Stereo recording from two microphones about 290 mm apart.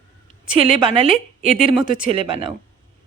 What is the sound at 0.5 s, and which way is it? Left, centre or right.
Speech, centre.